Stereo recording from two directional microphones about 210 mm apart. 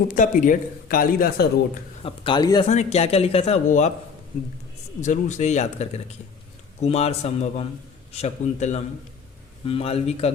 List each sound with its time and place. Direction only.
0.1 s a man's voice: 40° left (ahead or behind)
2.0 s a man's voice: 25° left (ahead or behind)
2.6 s a man's voice: 30° left (ahead or behind)
4.9 s a man's voice: 35° left (ahead or behind)